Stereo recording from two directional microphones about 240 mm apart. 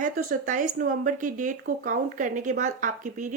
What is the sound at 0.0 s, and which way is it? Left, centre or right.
A woman's voice, right.